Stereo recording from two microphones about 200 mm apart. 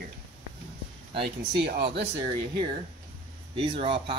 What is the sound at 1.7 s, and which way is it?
Speech, 55° right (ahead or behind).